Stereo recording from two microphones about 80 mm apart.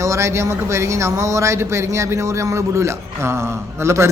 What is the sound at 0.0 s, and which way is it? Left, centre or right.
A man's voice, right.